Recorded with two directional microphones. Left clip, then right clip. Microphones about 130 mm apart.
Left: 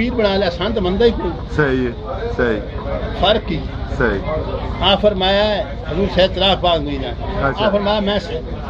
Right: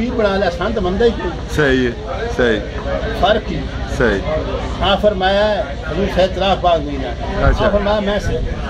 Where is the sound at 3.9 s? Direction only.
25° right (ahead or behind).